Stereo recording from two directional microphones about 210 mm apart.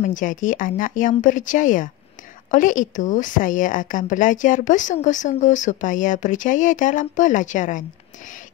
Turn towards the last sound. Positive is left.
turn(degrees=35)  # may be behind; listen again after turning